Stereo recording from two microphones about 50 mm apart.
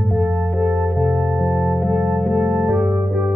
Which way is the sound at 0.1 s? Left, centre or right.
Centre.